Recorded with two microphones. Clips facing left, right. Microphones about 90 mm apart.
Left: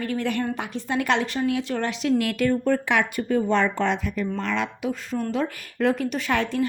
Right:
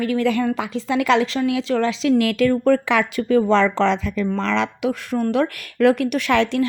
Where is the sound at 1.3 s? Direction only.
90° right.